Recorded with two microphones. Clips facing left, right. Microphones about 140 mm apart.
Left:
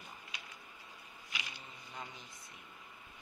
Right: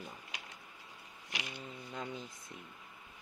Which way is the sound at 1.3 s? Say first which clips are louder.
Right 5 dB; 55° right (ahead or behind).